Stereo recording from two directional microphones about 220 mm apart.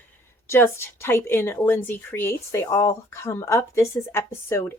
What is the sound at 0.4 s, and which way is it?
A woman's voice, 10° left (ahead or behind).